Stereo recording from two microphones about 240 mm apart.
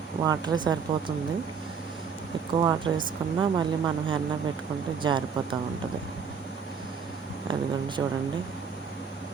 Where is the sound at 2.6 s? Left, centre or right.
Centre.